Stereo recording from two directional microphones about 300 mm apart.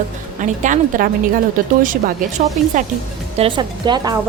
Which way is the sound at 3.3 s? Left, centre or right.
Centre.